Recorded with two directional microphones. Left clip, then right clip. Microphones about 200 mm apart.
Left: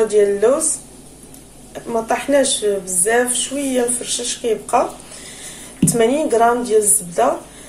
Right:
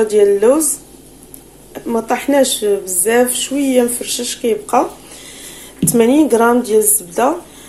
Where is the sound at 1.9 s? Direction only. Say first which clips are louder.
Right 2 dB; 40° right (ahead or behind).